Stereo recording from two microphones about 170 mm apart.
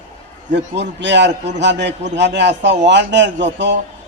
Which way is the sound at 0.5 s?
90° right.